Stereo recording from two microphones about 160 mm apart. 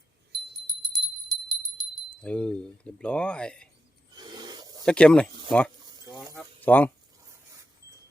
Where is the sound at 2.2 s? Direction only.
5° left (ahead or behind).